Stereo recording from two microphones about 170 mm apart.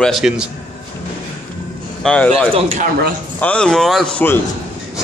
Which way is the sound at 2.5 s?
40° right (ahead or behind).